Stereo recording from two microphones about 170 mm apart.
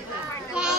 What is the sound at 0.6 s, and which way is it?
Children playing, 5° right (ahead or behind).